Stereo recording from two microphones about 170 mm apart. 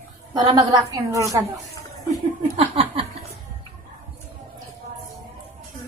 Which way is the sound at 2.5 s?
35° right (ahead or behind).